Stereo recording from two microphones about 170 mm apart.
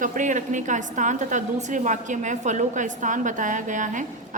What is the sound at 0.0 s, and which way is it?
A woman's voice, 50° right (ahead or behind).